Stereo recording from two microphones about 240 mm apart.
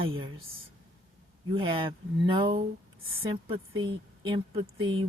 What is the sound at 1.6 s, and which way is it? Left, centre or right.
Speech, right.